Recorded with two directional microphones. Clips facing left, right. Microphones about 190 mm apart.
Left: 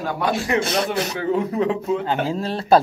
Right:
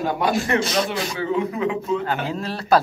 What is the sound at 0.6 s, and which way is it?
Speech, 60° left (ahead or behind).